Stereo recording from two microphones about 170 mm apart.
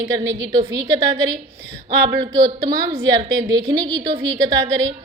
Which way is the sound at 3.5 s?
25° right (ahead or behind).